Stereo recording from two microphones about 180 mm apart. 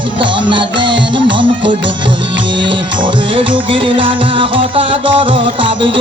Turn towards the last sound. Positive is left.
turn(degrees=-30)  # may be behind; listen again after turning